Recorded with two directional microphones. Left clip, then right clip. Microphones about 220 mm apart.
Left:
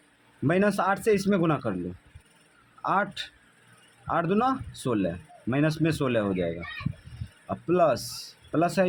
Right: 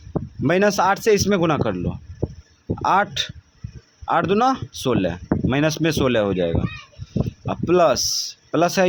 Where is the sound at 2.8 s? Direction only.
30° right (ahead or behind).